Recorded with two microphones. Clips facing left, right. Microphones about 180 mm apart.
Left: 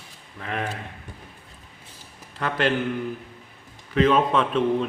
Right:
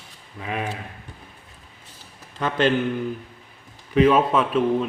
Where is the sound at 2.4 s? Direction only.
20° right (ahead or behind).